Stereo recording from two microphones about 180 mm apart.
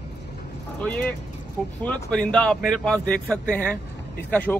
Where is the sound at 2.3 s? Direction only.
5° left (ahead or behind).